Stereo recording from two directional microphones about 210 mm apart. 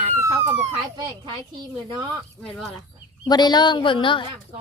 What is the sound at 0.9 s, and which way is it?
Speech, 20° right (ahead or behind).